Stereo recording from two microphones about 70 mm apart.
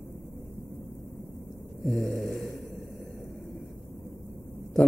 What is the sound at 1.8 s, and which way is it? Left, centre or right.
Speech, centre.